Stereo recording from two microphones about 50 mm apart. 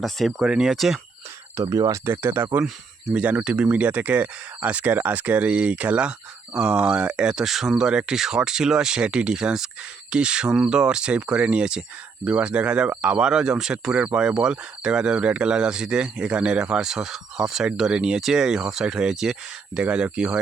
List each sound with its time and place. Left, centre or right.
0.0 s speech: centre
0.4 s speech: centre
1.5 s speech: right
2.0 s speech: right
3.1 s speech: right
7.4 s speech: centre
19.8 s speech: right